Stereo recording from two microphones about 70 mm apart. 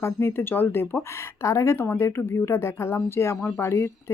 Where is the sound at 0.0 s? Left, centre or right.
Left.